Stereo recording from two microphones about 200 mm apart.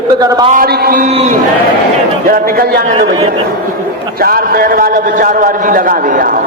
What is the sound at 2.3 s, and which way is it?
Speech, 45° right (ahead or behind).